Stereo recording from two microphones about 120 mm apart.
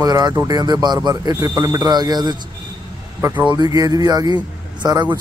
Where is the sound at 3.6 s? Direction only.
35° right (ahead or behind).